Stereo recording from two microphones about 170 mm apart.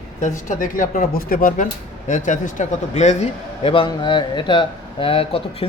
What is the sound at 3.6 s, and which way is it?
Speech, 30° left (ahead or behind).